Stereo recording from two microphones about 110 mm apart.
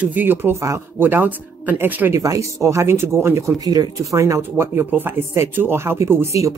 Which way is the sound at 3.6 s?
35° right (ahead or behind).